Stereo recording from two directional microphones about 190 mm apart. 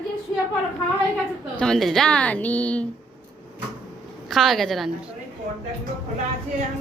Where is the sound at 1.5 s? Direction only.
5° left (ahead or behind).